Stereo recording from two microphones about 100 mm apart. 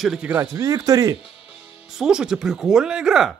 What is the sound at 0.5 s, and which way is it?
Speech, 35° right (ahead or behind).